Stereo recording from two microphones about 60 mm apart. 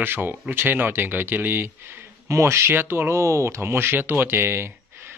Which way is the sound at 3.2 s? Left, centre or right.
Right.